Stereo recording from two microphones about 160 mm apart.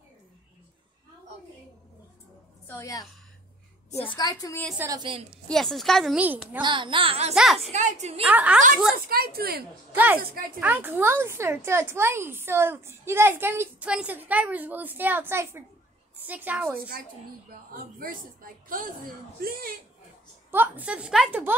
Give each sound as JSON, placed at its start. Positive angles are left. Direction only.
{"t": 2.6, "sound": "a woman's voice", "side_deg": 20}
{"t": 4.2, "sound": "a woman's voice", "side_deg": 25}
{"t": 4.7, "sound": "a woman's voice", "side_deg": -25}
{"t": 5.5, "sound": "a woman's voice", "side_deg": 0}
{"t": 6.2, "sound": "speech", "side_deg": -10}
{"t": 6.6, "sound": "a child's voice", "side_deg": -30}
{"t": 8.2, "sound": "speech", "side_deg": -10}
{"t": 8.9, "sound": "speech", "side_deg": -70}
{"t": 9.9, "sound": "speech", "side_deg": -10}
{"t": 17.9, "sound": "a woman's voice", "side_deg": -65}
{"t": 20.5, "sound": "speech", "side_deg": -10}